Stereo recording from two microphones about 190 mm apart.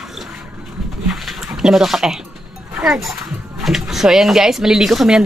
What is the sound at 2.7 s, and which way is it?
Speech, 5° right (ahead or behind).